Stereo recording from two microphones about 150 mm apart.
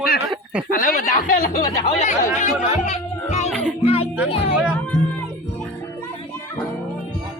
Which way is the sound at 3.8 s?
40° left (ahead or behind).